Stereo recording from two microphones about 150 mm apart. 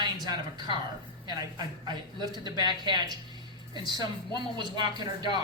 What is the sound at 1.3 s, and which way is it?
A woman's voice, 25° right (ahead or behind).